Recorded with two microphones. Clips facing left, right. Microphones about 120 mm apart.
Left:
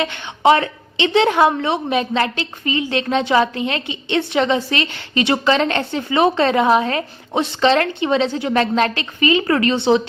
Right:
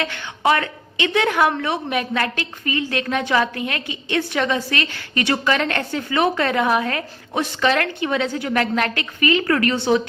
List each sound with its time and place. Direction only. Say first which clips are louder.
0.0 s a woman's voice: left 5 dB; 20° left (ahead or behind)